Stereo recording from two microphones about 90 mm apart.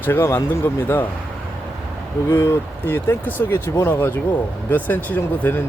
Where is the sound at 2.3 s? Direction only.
25° left (ahead or behind).